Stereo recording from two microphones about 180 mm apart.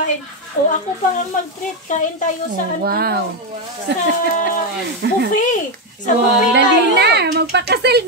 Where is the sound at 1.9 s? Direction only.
45° left (ahead or behind).